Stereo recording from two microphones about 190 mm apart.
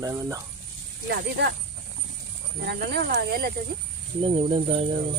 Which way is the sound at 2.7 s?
60° right (ahead or behind).